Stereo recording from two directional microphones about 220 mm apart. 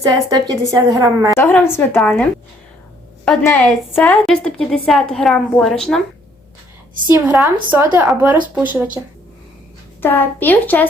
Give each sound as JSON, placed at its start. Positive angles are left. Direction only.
{"t": 0.0, "sound": "a woman's voice", "side_deg": -15}
{"t": 1.4, "sound": "speech", "side_deg": 10}
{"t": 3.7, "sound": "a woman's voice", "side_deg": 5}
{"t": 7.1, "sound": "a woman's voice", "side_deg": -5}
{"t": 10.0, "sound": "speech", "side_deg": 10}